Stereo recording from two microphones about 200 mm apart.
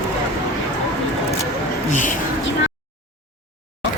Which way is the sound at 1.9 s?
40° left (ahead or behind).